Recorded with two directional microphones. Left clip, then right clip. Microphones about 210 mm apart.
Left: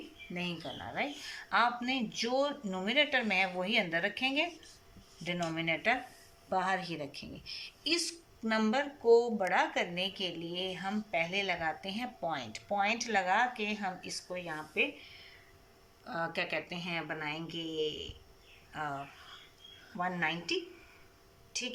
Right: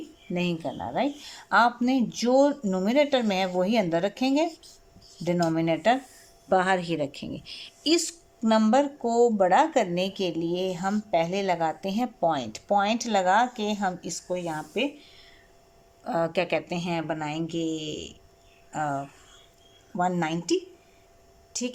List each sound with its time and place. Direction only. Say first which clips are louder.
0.3 s speech: right 10 dB; 55° right (ahead or behind)
16.0 s speech: right 10 dB; 55° right (ahead or behind)